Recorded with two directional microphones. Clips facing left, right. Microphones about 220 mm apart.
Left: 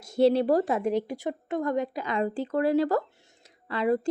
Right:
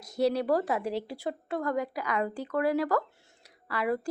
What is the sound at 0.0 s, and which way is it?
Speech, 25° left (ahead or behind).